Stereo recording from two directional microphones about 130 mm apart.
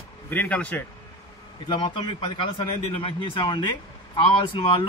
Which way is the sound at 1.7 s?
40° left (ahead or behind).